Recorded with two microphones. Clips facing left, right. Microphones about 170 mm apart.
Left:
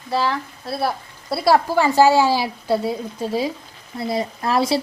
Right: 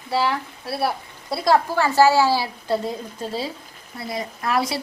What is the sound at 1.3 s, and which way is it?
A woman's voice, 10° left (ahead or behind).